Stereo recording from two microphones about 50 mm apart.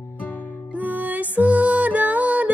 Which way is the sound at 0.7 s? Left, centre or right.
Right.